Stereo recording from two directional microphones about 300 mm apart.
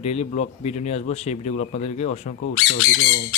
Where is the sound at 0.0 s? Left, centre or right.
Left.